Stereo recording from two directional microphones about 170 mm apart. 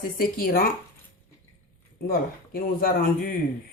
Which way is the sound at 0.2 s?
60° left (ahead or behind).